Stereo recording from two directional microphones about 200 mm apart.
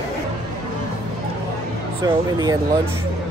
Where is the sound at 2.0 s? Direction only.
20° right (ahead or behind).